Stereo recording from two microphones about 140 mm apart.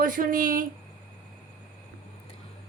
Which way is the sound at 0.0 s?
75° right (ahead or behind).